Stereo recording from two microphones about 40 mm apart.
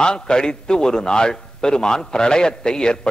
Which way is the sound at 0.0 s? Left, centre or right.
Centre.